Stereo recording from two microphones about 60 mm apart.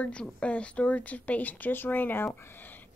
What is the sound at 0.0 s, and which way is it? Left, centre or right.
A woman's voice, centre.